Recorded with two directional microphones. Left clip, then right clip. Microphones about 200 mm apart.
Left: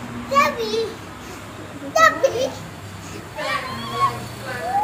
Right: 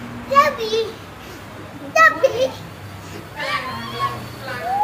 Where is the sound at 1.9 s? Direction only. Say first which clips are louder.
Right 2 dB; 20° right (ahead or behind).